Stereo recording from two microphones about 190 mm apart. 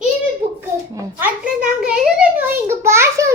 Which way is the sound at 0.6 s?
15° right (ahead or behind).